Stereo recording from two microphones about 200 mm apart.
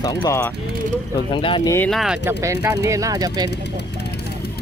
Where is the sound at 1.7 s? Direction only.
5° left (ahead or behind).